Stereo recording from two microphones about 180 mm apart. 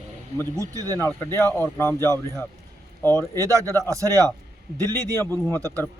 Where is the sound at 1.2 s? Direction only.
15° left (ahead or behind).